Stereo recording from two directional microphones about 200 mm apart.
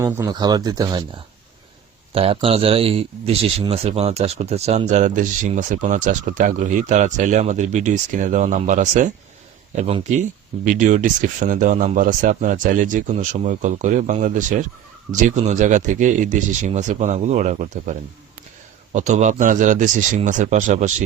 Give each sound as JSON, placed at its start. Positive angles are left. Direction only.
{"t": 0.0, "sound": "speech", "side_deg": -15}
{"t": 2.1, "sound": "a man's voice", "side_deg": -30}
{"t": 18.9, "sound": "a man's voice", "side_deg": -35}